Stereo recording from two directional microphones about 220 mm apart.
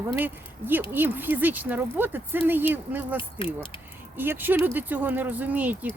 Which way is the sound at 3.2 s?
25° left (ahead or behind).